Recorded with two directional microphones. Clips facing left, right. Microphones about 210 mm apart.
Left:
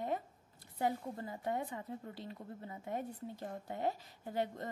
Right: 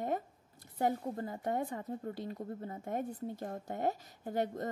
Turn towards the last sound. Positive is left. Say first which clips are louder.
# right 3 dB
turn(degrees=-45)  # may be behind; listen again after turning